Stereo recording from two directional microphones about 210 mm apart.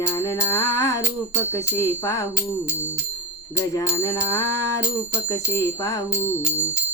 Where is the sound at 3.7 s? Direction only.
15° left (ahead or behind).